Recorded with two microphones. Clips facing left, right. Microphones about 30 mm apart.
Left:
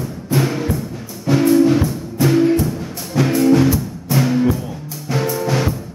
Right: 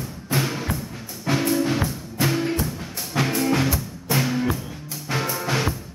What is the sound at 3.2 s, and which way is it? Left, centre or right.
Music, right.